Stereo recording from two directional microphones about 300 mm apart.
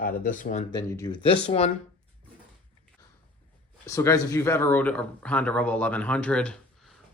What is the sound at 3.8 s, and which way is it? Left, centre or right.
A man's voice, centre.